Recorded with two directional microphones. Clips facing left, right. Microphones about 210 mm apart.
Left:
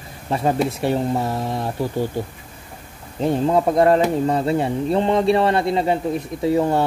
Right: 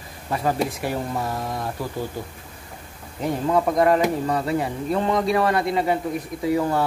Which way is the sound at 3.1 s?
25° left (ahead or behind).